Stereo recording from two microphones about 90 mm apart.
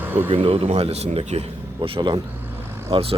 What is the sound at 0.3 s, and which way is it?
Speech, 90° right.